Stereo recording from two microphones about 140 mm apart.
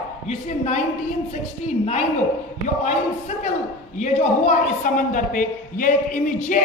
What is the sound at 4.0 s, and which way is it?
A man's voice, 65° left (ahead or behind).